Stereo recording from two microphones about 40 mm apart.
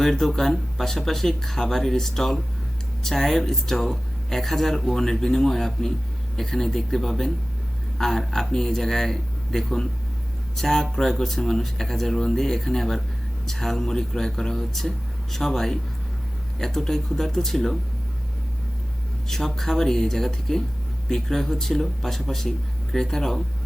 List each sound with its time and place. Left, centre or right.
0.0 s speech: centre
19.3 s speech: centre